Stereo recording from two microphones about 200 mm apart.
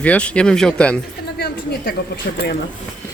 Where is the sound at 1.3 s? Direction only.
50° left (ahead or behind).